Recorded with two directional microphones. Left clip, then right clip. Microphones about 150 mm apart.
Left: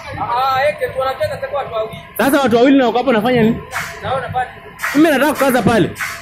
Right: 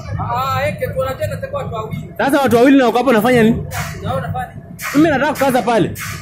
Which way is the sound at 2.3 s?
5° right (ahead or behind).